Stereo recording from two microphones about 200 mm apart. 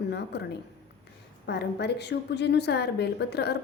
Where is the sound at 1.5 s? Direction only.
55° left (ahead or behind).